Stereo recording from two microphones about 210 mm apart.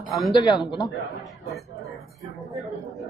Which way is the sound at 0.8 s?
Centre (ahead or behind).